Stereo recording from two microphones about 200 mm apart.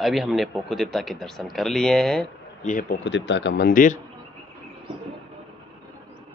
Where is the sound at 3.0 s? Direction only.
65° left (ahead or behind); by 4.0 s 45° left (ahead or behind).